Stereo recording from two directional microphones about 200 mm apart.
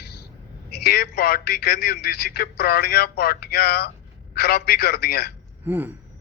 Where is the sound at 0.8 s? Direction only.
50° left (ahead or behind).